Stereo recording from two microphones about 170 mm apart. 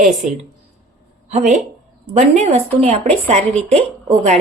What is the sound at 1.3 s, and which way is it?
Speech, 45° right (ahead or behind).